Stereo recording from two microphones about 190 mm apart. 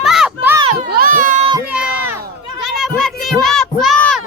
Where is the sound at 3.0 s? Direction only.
Centre (ahead or behind).